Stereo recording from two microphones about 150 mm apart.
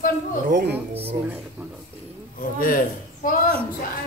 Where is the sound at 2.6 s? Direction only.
65° left (ahead or behind).